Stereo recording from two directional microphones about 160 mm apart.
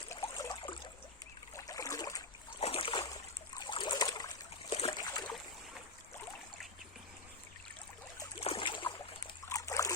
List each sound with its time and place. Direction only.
0.3 s a sound: 25° left (ahead or behind)
2.6 s splash: 35° left (ahead or behind)
3.1 s trickle: 25° left (ahead or behind)
4.7 s boat: 35° left (ahead or behind)
8.4 s boat: 35° left (ahead or behind)
9.5 s trickle: 20° left (ahead or behind)